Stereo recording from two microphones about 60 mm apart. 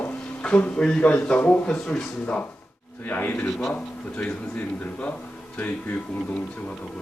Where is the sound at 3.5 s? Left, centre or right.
Centre.